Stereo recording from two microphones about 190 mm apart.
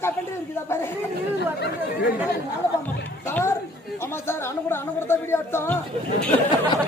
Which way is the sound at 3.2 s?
10° left (ahead or behind).